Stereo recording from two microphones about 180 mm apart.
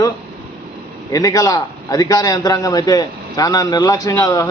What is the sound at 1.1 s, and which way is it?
A man's voice, 20° left (ahead or behind).